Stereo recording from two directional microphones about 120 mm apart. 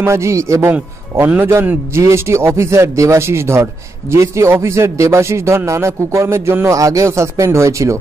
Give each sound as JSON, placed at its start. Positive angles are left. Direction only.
{"t": 0.0, "sound": "a man's voice", "side_deg": -25}